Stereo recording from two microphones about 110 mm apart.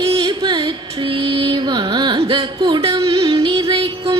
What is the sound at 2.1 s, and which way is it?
Music, 50° right (ahead or behind).